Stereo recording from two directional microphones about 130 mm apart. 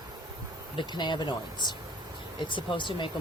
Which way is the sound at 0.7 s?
35° left (ahead or behind).